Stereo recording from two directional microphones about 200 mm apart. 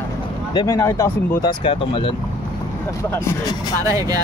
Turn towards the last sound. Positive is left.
turn(degrees=-15)  # may be behind; listen again after turning